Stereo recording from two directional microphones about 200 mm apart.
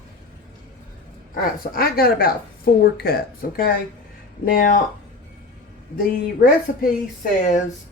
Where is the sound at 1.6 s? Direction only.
45° left (ahead or behind).